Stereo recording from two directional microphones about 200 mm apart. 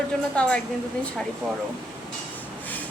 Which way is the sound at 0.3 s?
5° left (ahead or behind).